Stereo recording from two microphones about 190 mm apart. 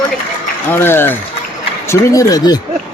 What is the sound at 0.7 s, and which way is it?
A man's voice, 10° left (ahead or behind).